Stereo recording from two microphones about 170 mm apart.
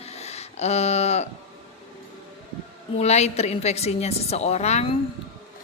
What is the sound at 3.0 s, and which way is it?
A woman's voice, 40° left (ahead or behind).